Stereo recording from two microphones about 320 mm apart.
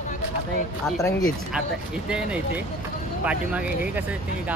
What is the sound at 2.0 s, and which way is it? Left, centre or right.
Speech, centre.